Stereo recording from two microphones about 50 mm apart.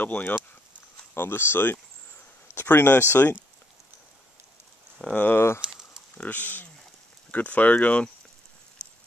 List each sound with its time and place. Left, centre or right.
0.0 s speech: left
1.1 s speech: left
5.1 s speech: left
5.6 s a sound: centre
6.1 s speech: left